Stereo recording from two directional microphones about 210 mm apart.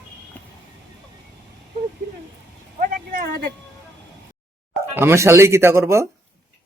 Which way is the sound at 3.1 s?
50° right (ahead or behind).